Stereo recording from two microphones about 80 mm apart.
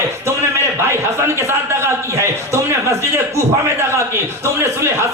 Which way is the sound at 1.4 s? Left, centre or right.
Right.